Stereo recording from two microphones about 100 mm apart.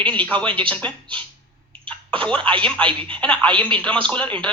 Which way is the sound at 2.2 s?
10° left (ahead or behind).